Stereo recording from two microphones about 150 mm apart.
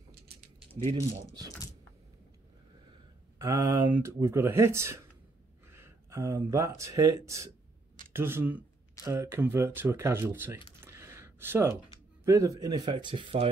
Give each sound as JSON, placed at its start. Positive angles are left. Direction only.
{"t": 3.3, "sound": "speech", "side_deg": -20}
{"t": 10.8, "sound": "a sound", "side_deg": -15}
{"t": 12.3, "sound": "speech", "side_deg": -20}